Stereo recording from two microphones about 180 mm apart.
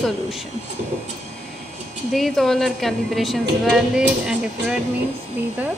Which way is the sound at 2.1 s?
Centre (ahead or behind).